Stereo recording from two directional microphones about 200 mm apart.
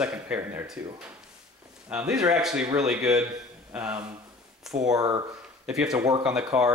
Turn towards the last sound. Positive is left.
turn(degrees=-5)  # may be behind; listen again after turning